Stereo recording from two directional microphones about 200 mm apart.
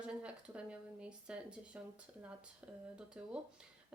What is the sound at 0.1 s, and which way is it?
Speech, 5° right (ahead or behind).